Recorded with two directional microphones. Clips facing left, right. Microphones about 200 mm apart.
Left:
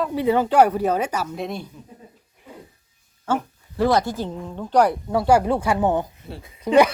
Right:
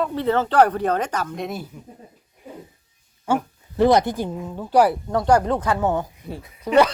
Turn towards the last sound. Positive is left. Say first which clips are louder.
# left 1 dB
turn(degrees=15)  # may be behind; listen again after turning